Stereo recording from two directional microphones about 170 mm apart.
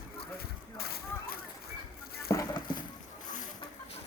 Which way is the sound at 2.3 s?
20° left (ahead or behind).